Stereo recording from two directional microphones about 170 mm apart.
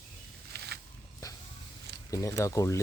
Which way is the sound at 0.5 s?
70° right (ahead or behind).